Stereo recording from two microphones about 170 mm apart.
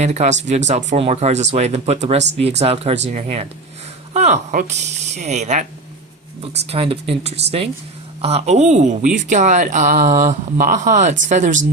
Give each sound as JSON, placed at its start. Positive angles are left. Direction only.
{"t": 0.0, "sound": "speech", "side_deg": -40}